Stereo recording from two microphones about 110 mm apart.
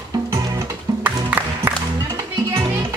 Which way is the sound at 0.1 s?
35° right (ahead or behind).